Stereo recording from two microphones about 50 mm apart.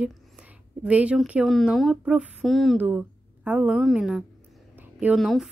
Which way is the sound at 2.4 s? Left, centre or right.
Centre.